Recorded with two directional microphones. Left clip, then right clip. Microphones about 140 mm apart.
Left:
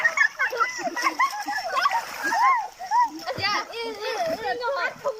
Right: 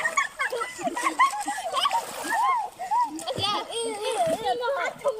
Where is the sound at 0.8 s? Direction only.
15° right (ahead or behind).